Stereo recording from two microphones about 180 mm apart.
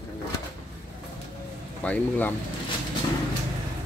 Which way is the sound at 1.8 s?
10° left (ahead or behind).